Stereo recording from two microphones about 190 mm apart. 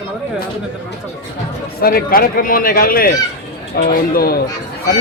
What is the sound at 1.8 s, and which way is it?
A man's voice, 50° left (ahead or behind).